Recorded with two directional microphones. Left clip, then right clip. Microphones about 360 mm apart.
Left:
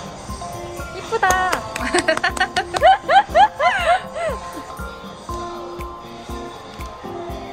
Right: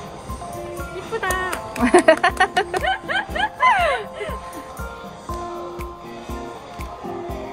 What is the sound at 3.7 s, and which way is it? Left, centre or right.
Music, centre.